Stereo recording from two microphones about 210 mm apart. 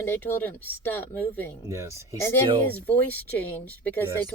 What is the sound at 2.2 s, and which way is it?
Speech, 10° left (ahead or behind).